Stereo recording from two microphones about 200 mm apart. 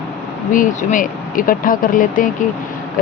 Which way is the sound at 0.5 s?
40° left (ahead or behind).